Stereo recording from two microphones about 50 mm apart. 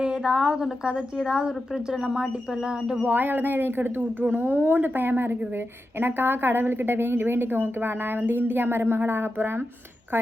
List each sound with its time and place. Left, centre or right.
0.0 s a woman's voice: centre
3.0 s a woman's voice: right